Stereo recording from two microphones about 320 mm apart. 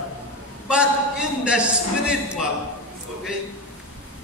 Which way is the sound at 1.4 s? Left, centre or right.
Centre.